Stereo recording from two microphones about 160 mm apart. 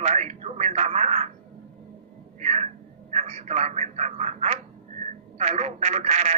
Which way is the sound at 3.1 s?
45° right (ahead or behind).